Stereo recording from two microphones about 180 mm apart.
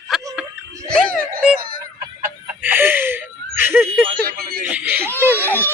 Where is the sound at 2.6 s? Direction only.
10° right (ahead or behind).